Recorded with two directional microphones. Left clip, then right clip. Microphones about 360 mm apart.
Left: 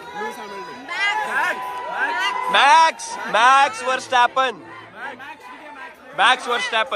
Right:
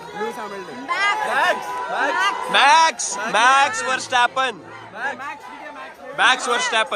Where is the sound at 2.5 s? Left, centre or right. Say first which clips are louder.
Left 1 dB; centre.